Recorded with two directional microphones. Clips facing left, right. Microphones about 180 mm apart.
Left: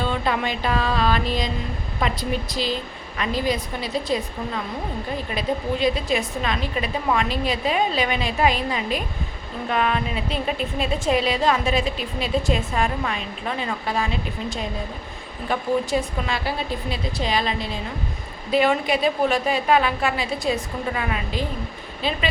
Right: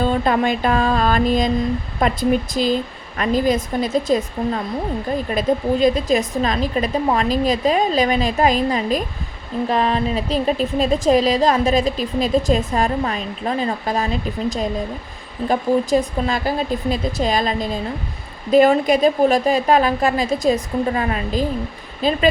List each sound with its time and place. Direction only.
0.0 s a woman's voice: 45° right (ahead or behind)